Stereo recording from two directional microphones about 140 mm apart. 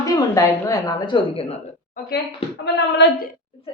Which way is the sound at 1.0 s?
40° left (ahead or behind).